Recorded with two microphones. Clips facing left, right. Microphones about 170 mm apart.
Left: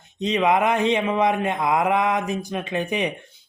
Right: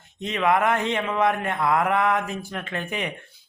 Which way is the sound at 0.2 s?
20° left (ahead or behind).